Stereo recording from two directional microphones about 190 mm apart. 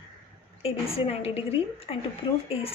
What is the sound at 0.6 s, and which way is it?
A woman's voice, 30° left (ahead or behind).